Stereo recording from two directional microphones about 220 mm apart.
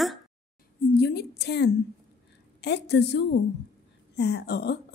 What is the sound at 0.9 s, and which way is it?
A woman's voice, 45° left (ahead or behind).